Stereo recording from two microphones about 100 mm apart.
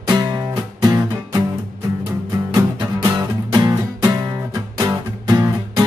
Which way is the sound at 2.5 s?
40° right (ahead or behind).